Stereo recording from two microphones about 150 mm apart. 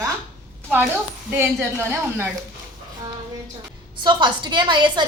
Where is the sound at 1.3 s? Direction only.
15° right (ahead or behind).